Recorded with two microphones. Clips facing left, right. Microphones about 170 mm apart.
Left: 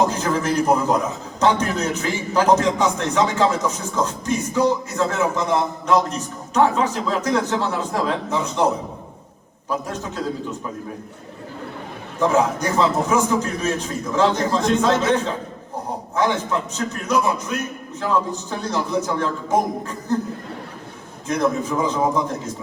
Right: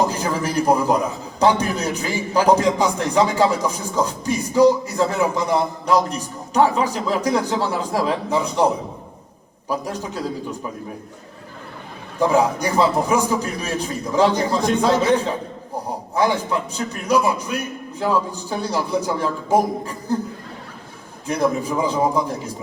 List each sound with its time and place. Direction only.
0.1 s a man's voice: 10° right (ahead or behind)
9.6 s a man's voice: 10° right (ahead or behind)
12.2 s a man's voice: 10° right (ahead or behind)
21.2 s a man's voice: 10° right (ahead or behind)